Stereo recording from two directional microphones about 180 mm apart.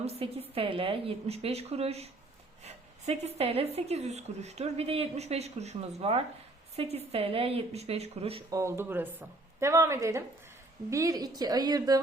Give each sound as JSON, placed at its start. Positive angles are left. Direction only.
{"t": 0.0, "sound": "speech", "side_deg": -35}
{"t": 8.4, "sound": "a woman's voice", "side_deg": -15}